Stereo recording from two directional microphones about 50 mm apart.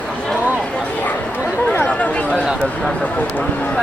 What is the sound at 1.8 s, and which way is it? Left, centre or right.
Chatter, left.